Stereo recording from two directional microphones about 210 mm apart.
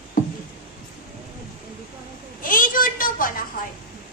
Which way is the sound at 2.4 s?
40° left (ahead or behind).